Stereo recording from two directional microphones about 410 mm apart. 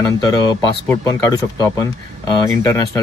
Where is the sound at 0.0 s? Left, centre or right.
Centre.